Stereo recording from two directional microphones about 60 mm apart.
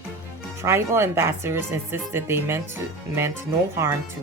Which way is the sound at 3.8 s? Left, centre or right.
Right.